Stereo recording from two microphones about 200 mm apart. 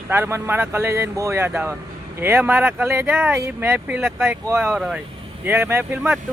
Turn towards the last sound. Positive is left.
turn(degrees=-5)  # may be behind; listen again after turning